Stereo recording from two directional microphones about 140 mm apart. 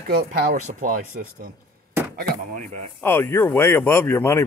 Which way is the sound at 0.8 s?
80° right.